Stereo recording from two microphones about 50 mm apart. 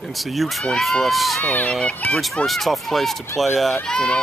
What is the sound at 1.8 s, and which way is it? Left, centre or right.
Speech, left.